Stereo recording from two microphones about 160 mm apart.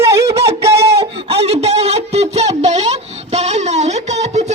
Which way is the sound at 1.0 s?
40° right (ahead or behind).